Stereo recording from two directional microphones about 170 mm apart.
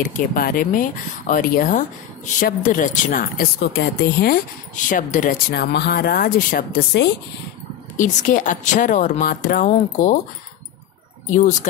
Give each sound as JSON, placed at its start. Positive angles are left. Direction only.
{"t": 0.0, "sound": "speech", "side_deg": 55}
{"t": 4.7, "sound": "speech", "side_deg": 50}
{"t": 8.0, "sound": "speech", "side_deg": 50}
{"t": 11.2, "sound": "speech", "side_deg": 50}